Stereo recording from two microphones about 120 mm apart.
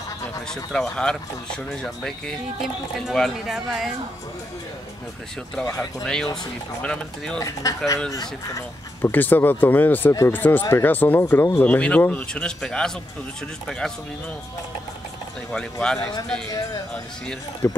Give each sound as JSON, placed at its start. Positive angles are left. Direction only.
{"t": 0.7, "sound": "speech", "side_deg": 5}
{"t": 6.0, "sound": "speech", "side_deg": 5}
{"t": 7.4, "sound": "speech", "side_deg": 25}
{"t": 9.0, "sound": "speech", "side_deg": 15}
{"t": 15.5, "sound": "speech", "side_deg": 5}
{"t": 17.6, "sound": "speech", "side_deg": 20}